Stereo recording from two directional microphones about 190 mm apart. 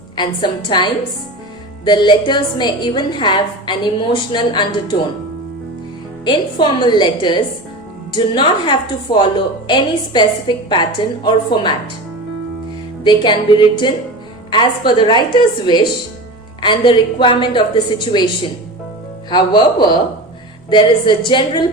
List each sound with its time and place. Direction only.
0.7 s a woman's voice: 25° left (ahead or behind)
6.2 s a woman's voice: 25° left (ahead or behind)
13.1 s a woman's voice: 25° left (ahead or behind)
19.3 s a woman's voice: 25° left (ahead or behind)